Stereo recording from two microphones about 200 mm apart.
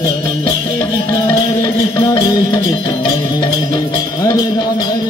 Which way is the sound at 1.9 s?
20° left (ahead or behind).